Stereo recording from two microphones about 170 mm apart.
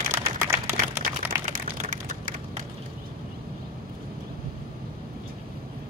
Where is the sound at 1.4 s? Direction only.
50° right (ahead or behind).